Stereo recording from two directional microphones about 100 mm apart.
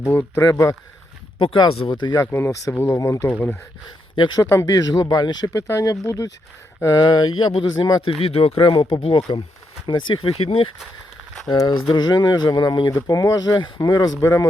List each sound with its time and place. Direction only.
0.1 s speech: 20° left (ahead or behind)
0.4 s speech: 30° left (ahead or behind)
1.5 s speech: 60° left (ahead or behind)
1.9 s speech: 45° left (ahead or behind)
2.2 s speech: 25° left (ahead or behind)
4.4 s speech: 35° left (ahead or behind)
5.5 s speech: 30° left (ahead or behind); by 8.1 s 50° left (ahead or behind)
8.2 s speech: 75° left (ahead or behind)
11.4 s speech: 40° left (ahead or behind)
12.9 s speech: 35° left (ahead or behind)